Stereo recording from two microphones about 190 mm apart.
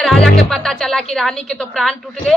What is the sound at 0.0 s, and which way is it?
Music, centre (ahead or behind).